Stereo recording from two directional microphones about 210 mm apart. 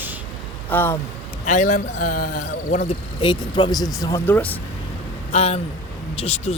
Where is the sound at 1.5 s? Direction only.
35° left (ahead or behind); by 4.5 s 10° left (ahead or behind).